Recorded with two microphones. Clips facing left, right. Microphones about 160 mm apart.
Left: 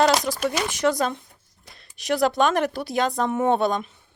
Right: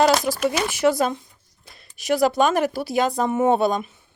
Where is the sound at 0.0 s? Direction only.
5° right (ahead or behind).